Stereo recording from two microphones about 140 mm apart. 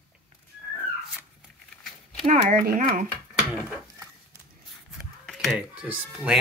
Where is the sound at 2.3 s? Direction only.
60° right (ahead or behind); by 3.0 s 75° right (ahead or behind).